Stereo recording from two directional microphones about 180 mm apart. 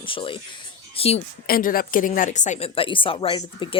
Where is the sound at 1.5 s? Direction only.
55° left (ahead or behind).